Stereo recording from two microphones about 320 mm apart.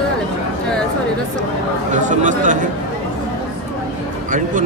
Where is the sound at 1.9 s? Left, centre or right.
Right.